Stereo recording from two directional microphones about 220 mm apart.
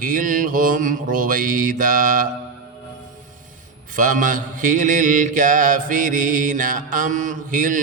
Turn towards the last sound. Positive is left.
turn(degrees=-35)  # may be behind; listen again after turning